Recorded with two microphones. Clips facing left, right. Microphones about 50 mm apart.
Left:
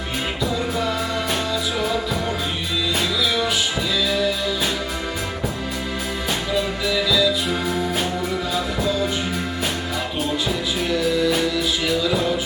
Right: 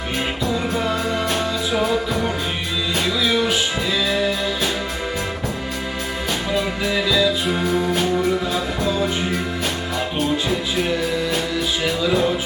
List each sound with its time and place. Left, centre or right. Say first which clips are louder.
6.5 s music: right 1 dB; right
7.6 s music: right 3 dB; centre